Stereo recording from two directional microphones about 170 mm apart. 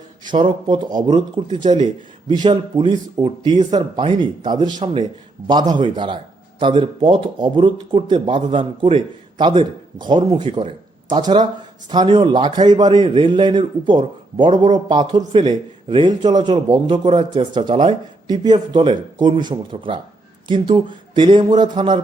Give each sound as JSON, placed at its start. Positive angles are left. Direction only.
{"t": 0.3, "sound": "a man's voice", "side_deg": -30}